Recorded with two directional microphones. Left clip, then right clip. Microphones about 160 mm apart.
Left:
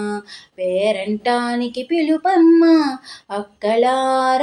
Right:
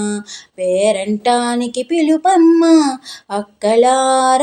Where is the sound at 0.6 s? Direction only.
45° right (ahead or behind).